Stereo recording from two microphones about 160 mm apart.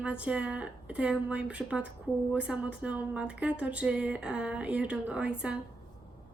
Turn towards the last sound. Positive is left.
turn(degrees=-5)  # may be behind; listen again after turning